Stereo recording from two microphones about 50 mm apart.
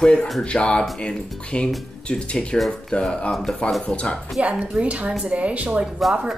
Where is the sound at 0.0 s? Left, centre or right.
Centre.